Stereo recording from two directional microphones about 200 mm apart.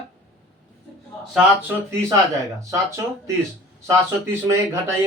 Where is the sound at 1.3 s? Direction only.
10° right (ahead or behind).